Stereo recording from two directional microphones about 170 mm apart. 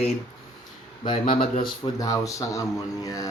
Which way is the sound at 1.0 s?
30° left (ahead or behind).